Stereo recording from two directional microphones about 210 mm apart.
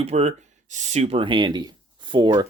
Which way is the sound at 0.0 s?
30° right (ahead or behind).